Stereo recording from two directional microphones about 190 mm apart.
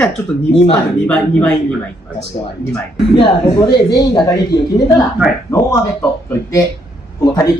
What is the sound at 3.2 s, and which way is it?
Speech, 20° left (ahead or behind).